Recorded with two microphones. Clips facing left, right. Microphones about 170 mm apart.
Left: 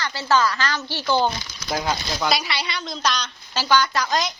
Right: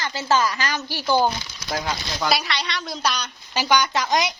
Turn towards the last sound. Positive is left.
turn(degrees=-15)  # may be behind; listen again after turning